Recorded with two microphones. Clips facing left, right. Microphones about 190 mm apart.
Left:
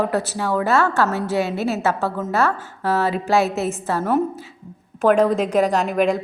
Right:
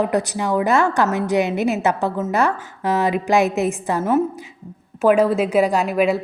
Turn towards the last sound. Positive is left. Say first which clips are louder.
# right 1 dB
turn(degrees=-5)  # may be behind; listen again after turning